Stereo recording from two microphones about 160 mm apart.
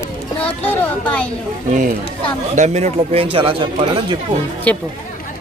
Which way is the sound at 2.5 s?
45° right (ahead or behind).